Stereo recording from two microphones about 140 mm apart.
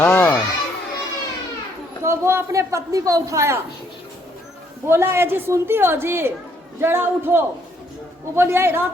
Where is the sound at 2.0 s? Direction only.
20° right (ahead or behind).